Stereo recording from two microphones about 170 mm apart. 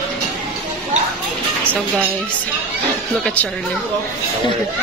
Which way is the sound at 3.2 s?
10° left (ahead or behind).